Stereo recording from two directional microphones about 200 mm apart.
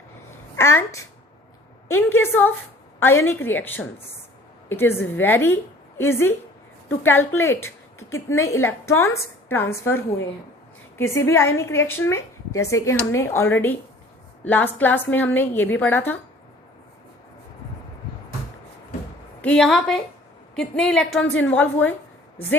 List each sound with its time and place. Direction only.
0.5 s a woman's voice: 10° left (ahead or behind)
11.1 s a woman's voice: 15° left (ahead or behind)
19.4 s a woman's voice: 5° left (ahead or behind)